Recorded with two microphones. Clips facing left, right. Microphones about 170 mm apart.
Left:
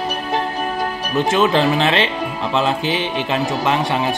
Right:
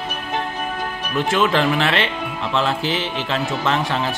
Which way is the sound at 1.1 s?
20° left (ahead or behind).